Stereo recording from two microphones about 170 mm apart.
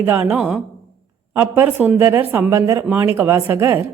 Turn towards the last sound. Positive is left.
turn(degrees=-15)  # may be behind; listen again after turning